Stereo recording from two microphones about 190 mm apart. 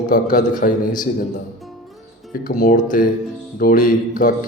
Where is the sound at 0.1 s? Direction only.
45° left (ahead or behind).